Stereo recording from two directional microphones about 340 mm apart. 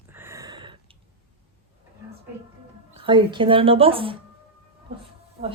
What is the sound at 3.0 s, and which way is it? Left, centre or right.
Speech, centre.